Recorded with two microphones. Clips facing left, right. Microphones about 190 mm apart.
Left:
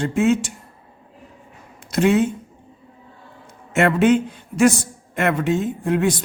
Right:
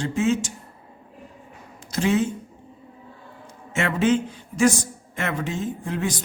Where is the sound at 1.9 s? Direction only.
60° left (ahead or behind).